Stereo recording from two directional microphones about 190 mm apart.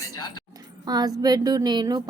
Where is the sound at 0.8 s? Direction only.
20° right (ahead or behind).